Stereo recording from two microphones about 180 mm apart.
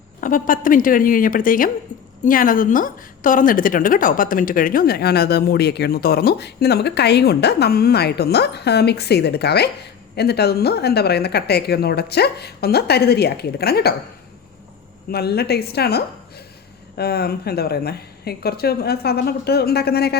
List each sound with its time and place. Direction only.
0.2 s a woman's voice: 50° left (ahead or behind)
15.1 s a woman's voice: 60° left (ahead or behind)